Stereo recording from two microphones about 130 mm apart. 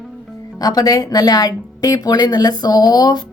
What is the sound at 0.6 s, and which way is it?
A woman's voice, 30° left (ahead or behind).